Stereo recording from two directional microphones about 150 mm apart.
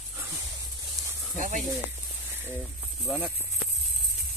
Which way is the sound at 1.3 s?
60° right (ahead or behind).